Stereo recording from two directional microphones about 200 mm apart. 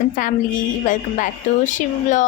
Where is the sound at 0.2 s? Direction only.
40° left (ahead or behind).